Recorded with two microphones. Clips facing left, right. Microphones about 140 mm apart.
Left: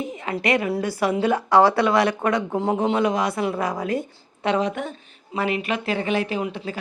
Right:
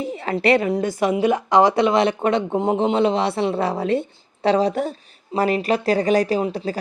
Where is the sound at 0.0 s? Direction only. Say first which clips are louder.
Right 5 dB; 35° right (ahead or behind).